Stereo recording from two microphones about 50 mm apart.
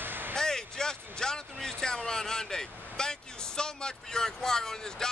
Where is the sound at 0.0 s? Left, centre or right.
Right.